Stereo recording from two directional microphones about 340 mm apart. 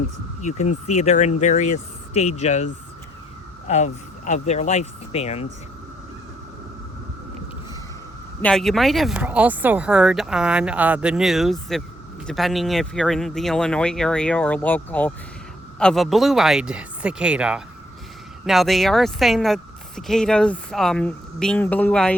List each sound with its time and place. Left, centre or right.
0.4 s speech: centre
3.7 s speech: centre
8.4 s speech: centre